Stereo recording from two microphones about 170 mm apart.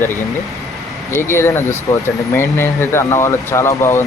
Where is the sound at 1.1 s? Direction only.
15° left (ahead or behind).